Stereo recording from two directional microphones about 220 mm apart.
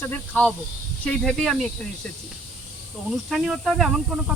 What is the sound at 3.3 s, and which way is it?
Speech, centre (ahead or behind).